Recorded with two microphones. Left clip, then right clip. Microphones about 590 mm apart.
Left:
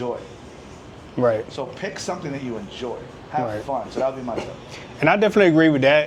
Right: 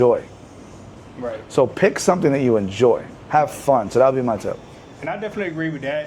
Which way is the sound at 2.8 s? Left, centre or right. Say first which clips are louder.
Right 15 dB; right.